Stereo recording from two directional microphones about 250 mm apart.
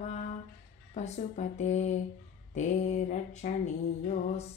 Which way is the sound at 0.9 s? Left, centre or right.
Left.